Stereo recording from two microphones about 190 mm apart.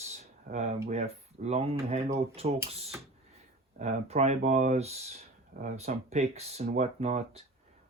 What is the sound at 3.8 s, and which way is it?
Speech, 35° right (ahead or behind).